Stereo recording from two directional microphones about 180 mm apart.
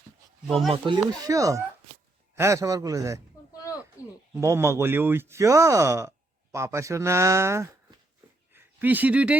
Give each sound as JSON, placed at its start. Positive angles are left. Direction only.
{"t": 0.4, "sound": "speech", "side_deg": 0}
{"t": 0.7, "sound": "speech", "side_deg": -25}
{"t": 4.0, "sound": "speech", "side_deg": 15}
{"t": 4.4, "sound": "speech", "side_deg": -15}